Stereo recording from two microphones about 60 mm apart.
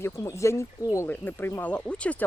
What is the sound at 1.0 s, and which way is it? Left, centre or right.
Speech, left.